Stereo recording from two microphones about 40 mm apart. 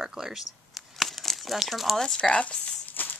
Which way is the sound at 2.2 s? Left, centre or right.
Left.